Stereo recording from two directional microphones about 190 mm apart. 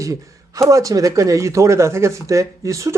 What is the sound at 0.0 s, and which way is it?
Speech, 15° right (ahead or behind).